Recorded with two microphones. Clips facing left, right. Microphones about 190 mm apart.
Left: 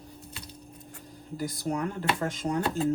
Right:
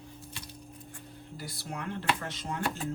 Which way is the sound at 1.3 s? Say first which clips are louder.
Left 10 dB; 45° left (ahead or behind).